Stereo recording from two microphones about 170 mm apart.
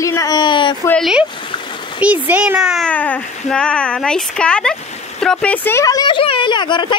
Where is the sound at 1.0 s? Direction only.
5° right (ahead or behind).